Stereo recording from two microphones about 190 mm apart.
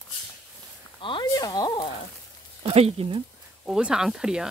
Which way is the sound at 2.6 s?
30° right (ahead or behind).